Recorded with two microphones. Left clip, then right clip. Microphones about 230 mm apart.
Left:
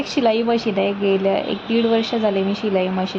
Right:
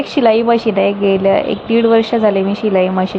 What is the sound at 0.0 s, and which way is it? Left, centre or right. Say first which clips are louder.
A woman's voice: right 6 dB; centre.